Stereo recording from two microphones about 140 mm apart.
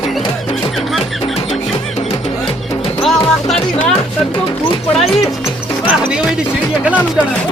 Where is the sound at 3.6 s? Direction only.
5° left (ahead or behind).